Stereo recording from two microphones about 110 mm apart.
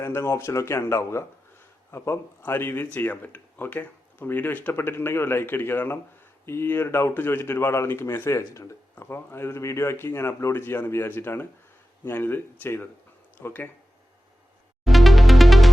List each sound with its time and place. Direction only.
0.0 s speech: 25° left (ahead or behind)
14.8 s music: centre (ahead or behind)